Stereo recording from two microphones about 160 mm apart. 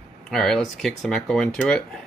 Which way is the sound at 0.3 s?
Centre (ahead or behind).